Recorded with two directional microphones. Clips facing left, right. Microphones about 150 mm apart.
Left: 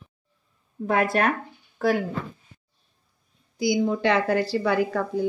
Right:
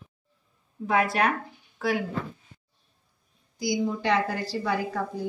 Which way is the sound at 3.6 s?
65° left (ahead or behind).